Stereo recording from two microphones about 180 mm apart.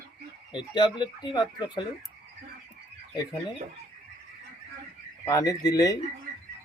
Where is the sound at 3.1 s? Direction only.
25° left (ahead or behind).